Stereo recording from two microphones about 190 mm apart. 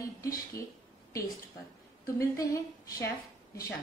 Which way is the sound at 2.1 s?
15° left (ahead or behind).